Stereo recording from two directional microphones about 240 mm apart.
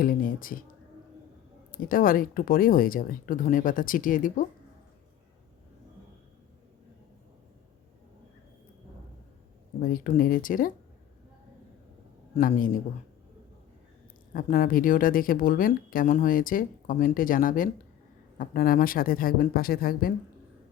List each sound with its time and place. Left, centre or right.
0.0 s speech: left
1.7 s speech: left
9.8 s speech: left
12.4 s speech: left
14.3 s speech: left